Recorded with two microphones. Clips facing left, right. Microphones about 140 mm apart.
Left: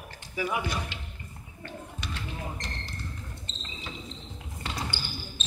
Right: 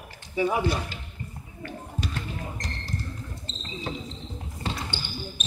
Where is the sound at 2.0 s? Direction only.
40° right (ahead or behind).